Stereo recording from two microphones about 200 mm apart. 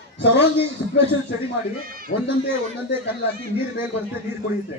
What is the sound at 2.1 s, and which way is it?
Speech, 40° left (ahead or behind).